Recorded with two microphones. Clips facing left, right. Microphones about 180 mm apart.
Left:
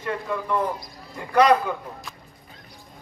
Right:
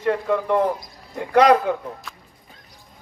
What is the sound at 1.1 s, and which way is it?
Speech, 90° right.